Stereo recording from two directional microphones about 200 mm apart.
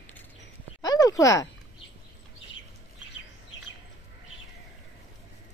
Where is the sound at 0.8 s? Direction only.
15° left (ahead or behind).